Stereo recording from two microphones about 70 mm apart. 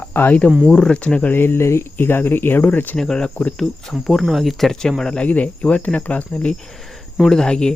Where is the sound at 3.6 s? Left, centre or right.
Centre.